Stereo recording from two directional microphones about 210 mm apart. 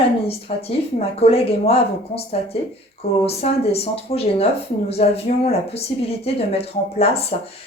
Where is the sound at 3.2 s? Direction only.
30° left (ahead or behind).